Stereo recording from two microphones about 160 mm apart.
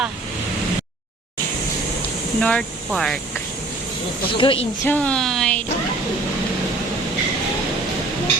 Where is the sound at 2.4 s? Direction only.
5° left (ahead or behind).